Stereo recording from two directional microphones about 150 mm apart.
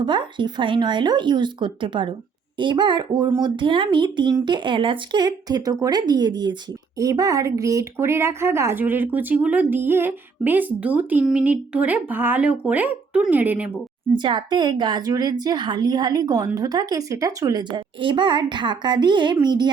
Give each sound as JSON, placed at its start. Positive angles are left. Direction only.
{"t": 0.0, "sound": "a child's voice", "side_deg": -30}
{"t": 14.2, "sound": "a child's voice", "side_deg": -30}